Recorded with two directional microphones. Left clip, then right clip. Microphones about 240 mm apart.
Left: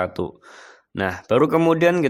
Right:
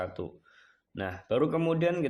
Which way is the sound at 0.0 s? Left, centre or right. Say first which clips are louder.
Left 11 dB; left.